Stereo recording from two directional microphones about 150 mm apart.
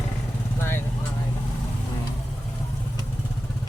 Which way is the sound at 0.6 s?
15° left (ahead or behind).